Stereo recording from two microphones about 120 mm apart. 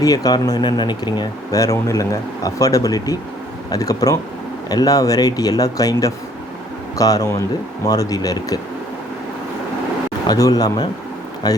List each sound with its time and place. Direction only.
0.0 s speech: 30° left (ahead or behind)
10.2 s speech: 30° left (ahead or behind)